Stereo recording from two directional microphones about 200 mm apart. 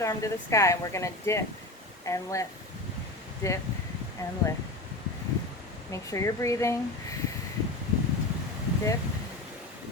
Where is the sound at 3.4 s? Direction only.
15° left (ahead or behind).